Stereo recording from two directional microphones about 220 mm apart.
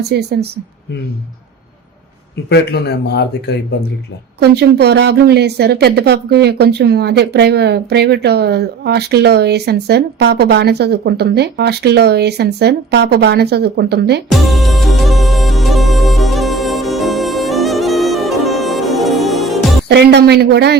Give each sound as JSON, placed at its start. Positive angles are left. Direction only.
{"t": 0.1, "sound": "a woman's voice", "side_deg": -50}
{"t": 2.5, "sound": "speech", "side_deg": 50}
{"t": 4.4, "sound": "a woman's voice", "side_deg": -50}
{"t": 14.3, "sound": "music", "side_deg": 0}
{"t": 19.9, "sound": "a woman's voice", "side_deg": -50}